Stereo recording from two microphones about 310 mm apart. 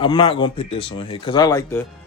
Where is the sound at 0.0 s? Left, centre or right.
Centre.